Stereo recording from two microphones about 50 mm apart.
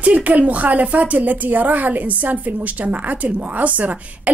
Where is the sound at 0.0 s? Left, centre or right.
Right.